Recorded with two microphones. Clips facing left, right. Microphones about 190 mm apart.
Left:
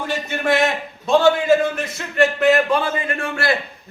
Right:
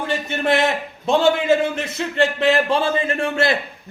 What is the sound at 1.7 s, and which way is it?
A man's voice, 25° right (ahead or behind).